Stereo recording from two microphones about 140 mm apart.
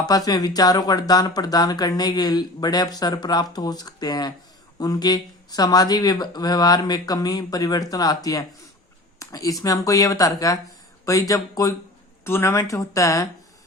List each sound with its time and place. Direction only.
0.3 s speech: 30° left (ahead or behind)